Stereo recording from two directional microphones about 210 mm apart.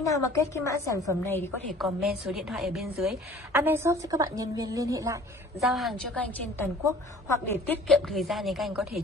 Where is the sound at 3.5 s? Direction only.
10° right (ahead or behind).